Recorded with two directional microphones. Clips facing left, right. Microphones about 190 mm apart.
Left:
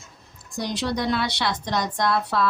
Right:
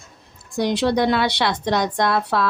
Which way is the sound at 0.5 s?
65° right (ahead or behind).